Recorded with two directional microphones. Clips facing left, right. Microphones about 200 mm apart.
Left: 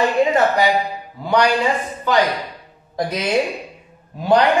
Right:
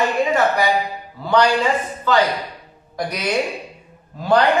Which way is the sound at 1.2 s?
15° left (ahead or behind).